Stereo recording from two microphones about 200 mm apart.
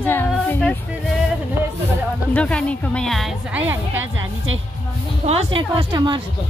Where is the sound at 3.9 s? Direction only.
80° right.